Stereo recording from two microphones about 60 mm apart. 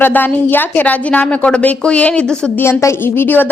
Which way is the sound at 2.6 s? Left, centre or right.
Left.